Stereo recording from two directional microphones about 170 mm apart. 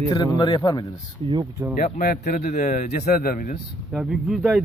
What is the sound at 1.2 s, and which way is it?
Speech, 35° right (ahead or behind).